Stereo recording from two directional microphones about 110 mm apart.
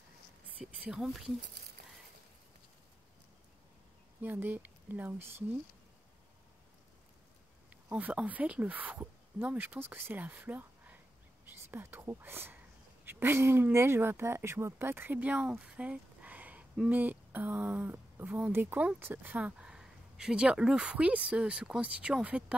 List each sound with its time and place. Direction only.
0.7 s speech: 5° right (ahead or behind)
4.2 s speech: 15° right (ahead or behind)
7.7 s speech: 10° right (ahead or behind)